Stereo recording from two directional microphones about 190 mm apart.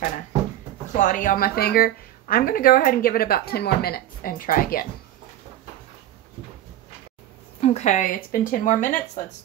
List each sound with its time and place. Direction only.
0.9 s speech: 45° left (ahead or behind)
7.6 s speech: 35° left (ahead or behind)